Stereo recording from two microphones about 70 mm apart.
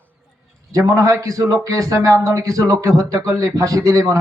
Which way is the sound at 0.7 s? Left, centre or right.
Right.